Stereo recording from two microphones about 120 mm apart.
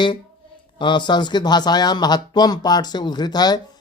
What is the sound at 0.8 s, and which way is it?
A man's voice, 40° left (ahead or behind).